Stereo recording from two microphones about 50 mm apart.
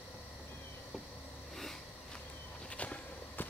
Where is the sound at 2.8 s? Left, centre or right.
Left.